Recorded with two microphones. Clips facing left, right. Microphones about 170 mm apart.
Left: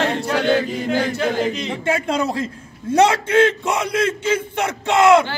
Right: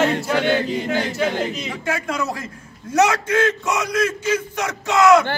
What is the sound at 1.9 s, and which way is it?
A man's voice, 30° left (ahead or behind).